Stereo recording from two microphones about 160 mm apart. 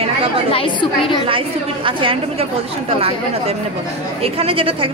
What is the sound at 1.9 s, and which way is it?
Speech, 30° right (ahead or behind).